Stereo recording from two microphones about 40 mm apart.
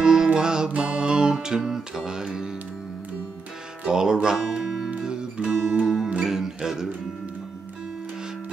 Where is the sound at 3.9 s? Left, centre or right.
Centre.